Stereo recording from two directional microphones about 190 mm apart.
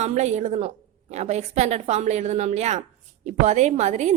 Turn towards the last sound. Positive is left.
turn(degrees=-35)  # may be behind; listen again after turning